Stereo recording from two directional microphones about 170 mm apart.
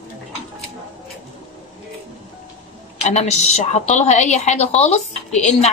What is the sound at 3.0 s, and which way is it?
A woman's voice, 40° left (ahead or behind).